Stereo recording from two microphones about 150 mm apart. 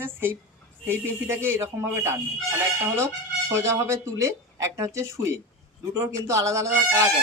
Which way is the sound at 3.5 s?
20° right (ahead or behind).